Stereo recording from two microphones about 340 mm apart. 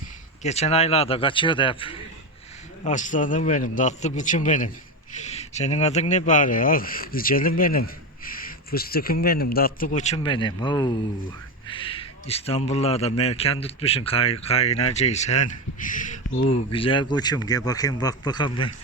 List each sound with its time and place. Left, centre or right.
0.4 s a man's voice: centre